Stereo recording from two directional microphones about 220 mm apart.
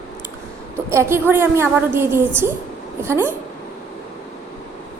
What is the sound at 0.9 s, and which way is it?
A woman's voice, 10° right (ahead or behind).